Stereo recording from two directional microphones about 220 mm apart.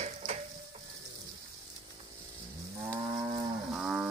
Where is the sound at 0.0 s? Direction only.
30° right (ahead or behind).